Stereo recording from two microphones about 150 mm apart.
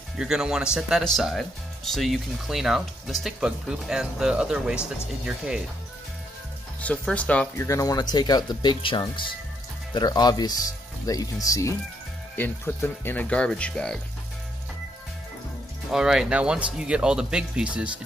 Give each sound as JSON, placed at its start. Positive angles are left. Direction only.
{"t": 0.2, "sound": "speech", "side_deg": -5}
{"t": 6.8, "sound": "speech", "side_deg": 10}
{"t": 7.6, "sound": "speech", "side_deg": 25}
{"t": 15.9, "sound": "speech", "side_deg": -5}